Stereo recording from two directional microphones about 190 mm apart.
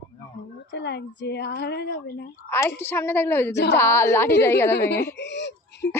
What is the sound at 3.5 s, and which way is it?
Speech, 65° left (ahead or behind).